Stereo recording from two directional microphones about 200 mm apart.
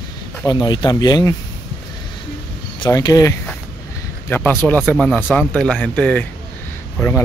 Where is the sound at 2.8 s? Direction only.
20° left (ahead or behind).